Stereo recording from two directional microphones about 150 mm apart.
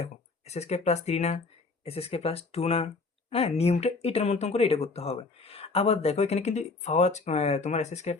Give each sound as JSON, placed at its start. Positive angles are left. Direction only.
{"t": 0.0, "sound": "speech", "side_deg": 45}